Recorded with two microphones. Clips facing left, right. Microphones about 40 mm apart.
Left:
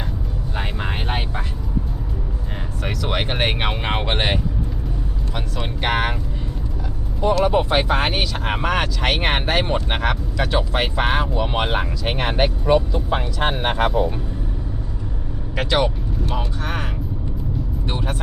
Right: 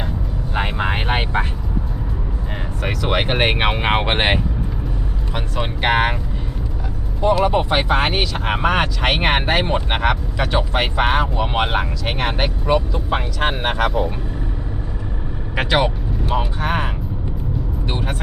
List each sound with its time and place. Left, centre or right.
0.5 s vehicle: right
2.8 s speech: centre
7.3 s speech: centre
8.6 s speech: centre
12.6 s speech: right
15.5 s speech: centre
16.6 s speech: right